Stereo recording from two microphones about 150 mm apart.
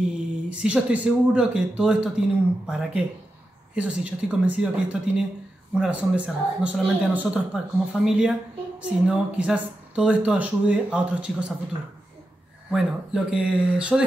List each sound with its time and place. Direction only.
0.5 s speech: 5° right (ahead or behind)
12.7 s speech: 5° right (ahead or behind)